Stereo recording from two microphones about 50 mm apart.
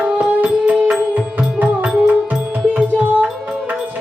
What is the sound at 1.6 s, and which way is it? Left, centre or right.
Music, right.